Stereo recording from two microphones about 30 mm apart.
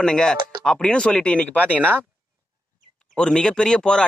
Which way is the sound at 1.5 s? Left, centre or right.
Left.